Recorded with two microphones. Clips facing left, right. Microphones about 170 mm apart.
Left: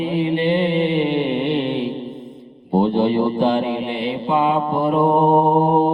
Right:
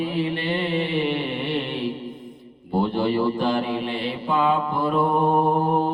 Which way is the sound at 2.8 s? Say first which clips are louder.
Left 5 dB; 20° left (ahead or behind).